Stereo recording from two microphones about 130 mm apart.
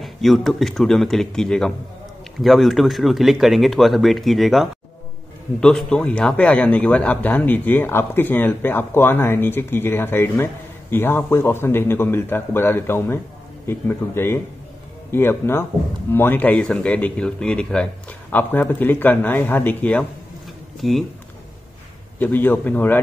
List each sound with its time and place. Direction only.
0.0 s a man's voice: centre (ahead or behind)
20.8 s speech: centre (ahead or behind)
22.2 s a man's voice: 15° left (ahead or behind)